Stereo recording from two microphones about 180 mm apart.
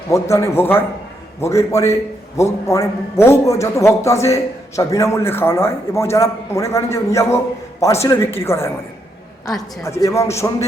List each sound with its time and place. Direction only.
0.1 s a man's voice: 15° left (ahead or behind)